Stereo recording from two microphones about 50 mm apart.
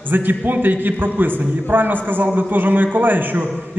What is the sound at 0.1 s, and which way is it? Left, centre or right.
A man's voice, right.